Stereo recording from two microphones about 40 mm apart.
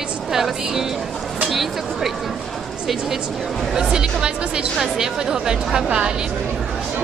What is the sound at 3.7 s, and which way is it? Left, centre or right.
A woman's voice, centre.